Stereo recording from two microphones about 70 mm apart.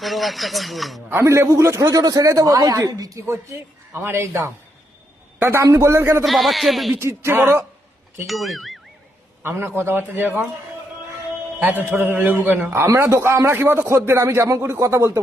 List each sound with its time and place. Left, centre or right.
0.0 s speech: centre
1.1 s a man's voice: right
2.0 s a woman's voice: right
3.9 s a man's voice: right
6.2 s speech: centre
6.9 s speech: right
8.3 s speech: centre
9.4 s a man's voice: right
11.6 s a man's voice: right
13.0 s speech: right